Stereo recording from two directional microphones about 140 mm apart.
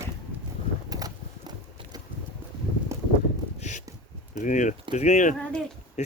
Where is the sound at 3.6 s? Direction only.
60° left (ahead or behind).